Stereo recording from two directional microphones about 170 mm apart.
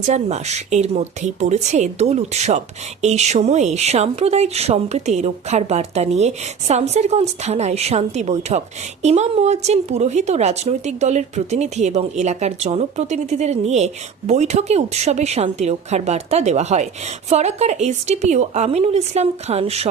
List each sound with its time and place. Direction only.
0.1 s speech: 40° right (ahead or behind)